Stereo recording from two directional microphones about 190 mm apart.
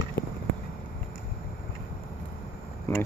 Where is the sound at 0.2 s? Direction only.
60° left (ahead or behind).